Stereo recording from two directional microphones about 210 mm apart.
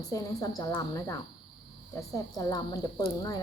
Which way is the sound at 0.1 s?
15° left (ahead or behind).